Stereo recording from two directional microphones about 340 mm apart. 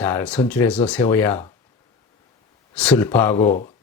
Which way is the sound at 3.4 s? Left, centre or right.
Left.